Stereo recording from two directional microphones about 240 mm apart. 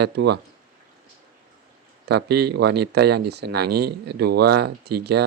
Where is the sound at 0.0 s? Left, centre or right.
Right.